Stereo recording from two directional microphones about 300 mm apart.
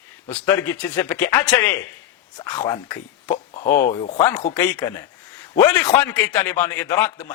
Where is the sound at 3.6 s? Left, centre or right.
Left.